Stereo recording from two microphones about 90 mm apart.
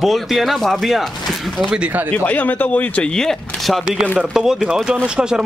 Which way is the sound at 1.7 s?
15° right (ahead or behind).